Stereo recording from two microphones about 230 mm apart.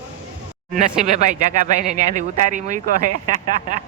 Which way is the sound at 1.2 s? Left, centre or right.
Right.